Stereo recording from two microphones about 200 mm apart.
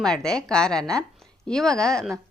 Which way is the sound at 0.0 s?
5° left (ahead or behind).